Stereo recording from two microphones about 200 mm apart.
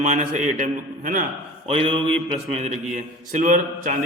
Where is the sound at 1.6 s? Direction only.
30° right (ahead or behind).